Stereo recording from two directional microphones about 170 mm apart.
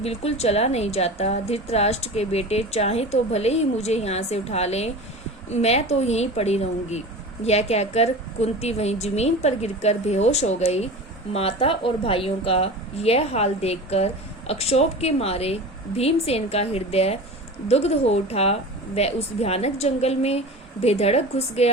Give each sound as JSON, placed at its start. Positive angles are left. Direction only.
{"t": 0.0, "sound": "a woman's voice", "side_deg": 35}